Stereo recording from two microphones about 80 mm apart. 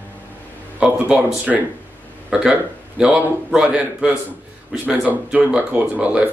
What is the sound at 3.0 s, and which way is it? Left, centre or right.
Speech, centre.